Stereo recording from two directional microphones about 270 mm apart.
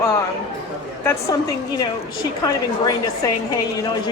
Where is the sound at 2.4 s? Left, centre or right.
Centre.